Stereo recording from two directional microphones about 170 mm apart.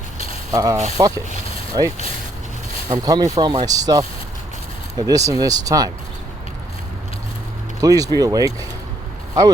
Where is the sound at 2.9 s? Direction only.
20° right (ahead or behind).